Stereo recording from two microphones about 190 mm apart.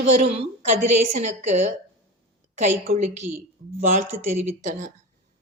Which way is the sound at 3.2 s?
15° right (ahead or behind).